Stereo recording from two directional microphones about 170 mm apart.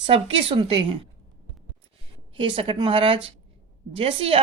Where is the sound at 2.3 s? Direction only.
30° right (ahead or behind).